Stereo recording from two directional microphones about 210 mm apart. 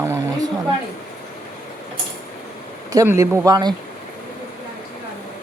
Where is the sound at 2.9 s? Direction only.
15° right (ahead or behind).